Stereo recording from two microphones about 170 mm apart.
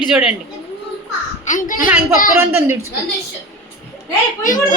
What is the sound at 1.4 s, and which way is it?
Speech, 50° left (ahead or behind).